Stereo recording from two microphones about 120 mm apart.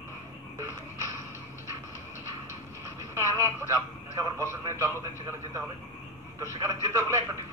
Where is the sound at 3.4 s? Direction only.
25° right (ahead or behind).